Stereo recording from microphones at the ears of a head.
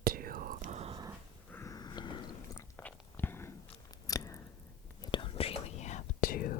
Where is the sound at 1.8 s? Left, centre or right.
Left.